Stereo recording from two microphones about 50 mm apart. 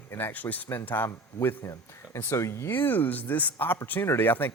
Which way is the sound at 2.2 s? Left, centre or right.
Left.